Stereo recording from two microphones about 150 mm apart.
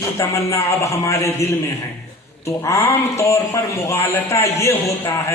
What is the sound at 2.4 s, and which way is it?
A man's voice, 20° left (ahead or behind).